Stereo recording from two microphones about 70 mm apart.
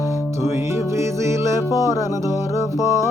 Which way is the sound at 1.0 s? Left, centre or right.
Right.